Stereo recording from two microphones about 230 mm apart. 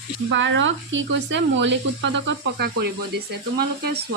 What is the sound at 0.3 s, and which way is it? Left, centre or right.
Speech, right.